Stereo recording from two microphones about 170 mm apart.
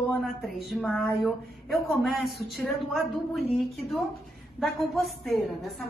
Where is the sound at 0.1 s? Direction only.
Centre (ahead or behind).